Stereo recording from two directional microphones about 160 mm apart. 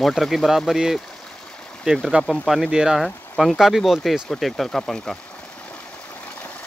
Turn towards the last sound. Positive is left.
turn(degrees=5)  # may be behind; listen again after turning